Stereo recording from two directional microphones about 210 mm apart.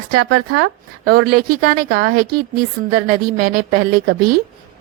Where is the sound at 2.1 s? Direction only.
45° right (ahead or behind).